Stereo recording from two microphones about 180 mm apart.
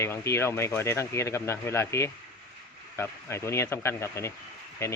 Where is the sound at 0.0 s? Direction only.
15° left (ahead or behind).